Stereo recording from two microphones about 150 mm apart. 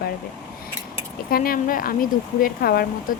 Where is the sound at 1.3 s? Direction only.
75° left (ahead or behind).